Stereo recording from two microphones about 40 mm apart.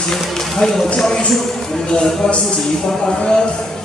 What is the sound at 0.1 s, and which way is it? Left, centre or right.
A man's voice, centre.